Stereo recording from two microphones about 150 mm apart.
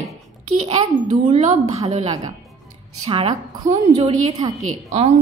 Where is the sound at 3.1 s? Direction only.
35° right (ahead or behind).